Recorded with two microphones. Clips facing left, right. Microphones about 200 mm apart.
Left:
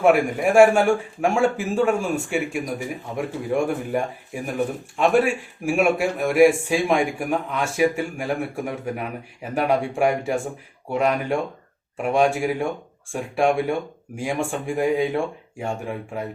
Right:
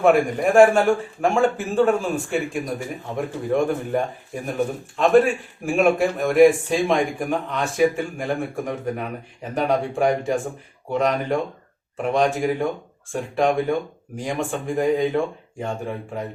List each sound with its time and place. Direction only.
0.0 s a man's voice: 10° left (ahead or behind)